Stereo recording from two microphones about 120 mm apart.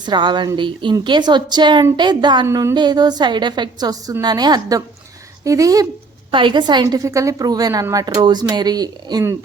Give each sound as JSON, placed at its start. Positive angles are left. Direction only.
{"t": 0.0, "sound": "a woman's voice", "side_deg": -40}
{"t": 2.5, "sound": "speech", "side_deg": -25}
{"t": 2.7, "sound": "a woman's voice", "side_deg": -35}
{"t": 6.3, "sound": "a woman's voice", "side_deg": -40}
{"t": 6.8, "sound": "a woman's voice", "side_deg": -25}